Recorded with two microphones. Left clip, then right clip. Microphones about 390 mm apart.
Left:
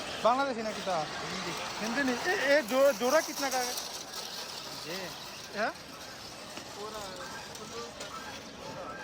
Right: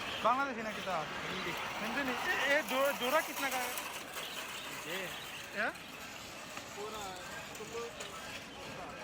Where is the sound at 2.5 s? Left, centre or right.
Centre.